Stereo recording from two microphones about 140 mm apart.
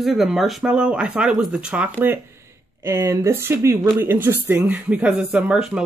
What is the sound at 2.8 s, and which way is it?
Speech, 20° right (ahead or behind).